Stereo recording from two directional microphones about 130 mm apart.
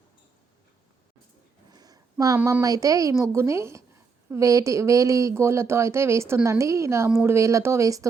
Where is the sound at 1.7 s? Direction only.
30° right (ahead or behind).